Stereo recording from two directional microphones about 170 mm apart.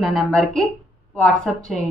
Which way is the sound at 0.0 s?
Centre (ahead or behind).